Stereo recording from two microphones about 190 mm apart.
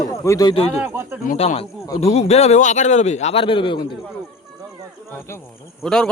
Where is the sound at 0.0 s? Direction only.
20° left (ahead or behind).